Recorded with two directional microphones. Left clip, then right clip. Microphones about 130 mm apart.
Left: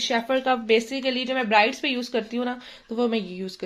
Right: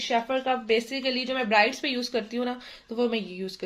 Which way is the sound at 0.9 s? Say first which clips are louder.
Left 3 dB; 25° left (ahead or behind).